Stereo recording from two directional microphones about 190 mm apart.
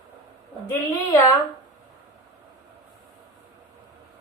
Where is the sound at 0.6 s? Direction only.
20° left (ahead or behind).